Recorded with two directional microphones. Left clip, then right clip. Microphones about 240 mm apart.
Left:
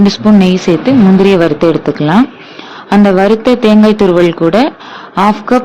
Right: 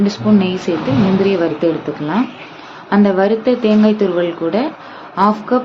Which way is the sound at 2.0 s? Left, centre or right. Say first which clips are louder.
Left 8 dB; left.